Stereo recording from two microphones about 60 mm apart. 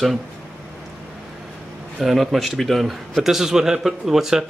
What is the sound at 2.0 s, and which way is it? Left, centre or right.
A man's voice, centre.